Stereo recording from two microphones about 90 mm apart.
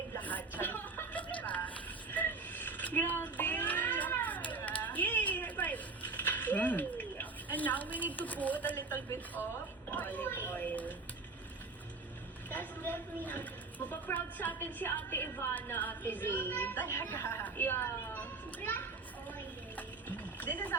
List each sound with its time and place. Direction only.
0.2 s vehicle: 20° left (ahead or behind)
2.1 s a sound: 20° left (ahead or behind)
9.1 s a woman's voice: 20° left (ahead or behind)
9.9 s a sound: 20° left (ahead or behind)
12.5 s speech: 20° left (ahead or behind)
19.7 s horse: 20° left (ahead or behind)